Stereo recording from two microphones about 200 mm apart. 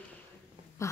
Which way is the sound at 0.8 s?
15° left (ahead or behind).